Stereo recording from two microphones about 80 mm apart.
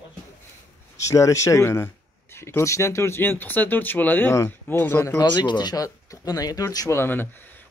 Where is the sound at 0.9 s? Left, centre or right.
Left.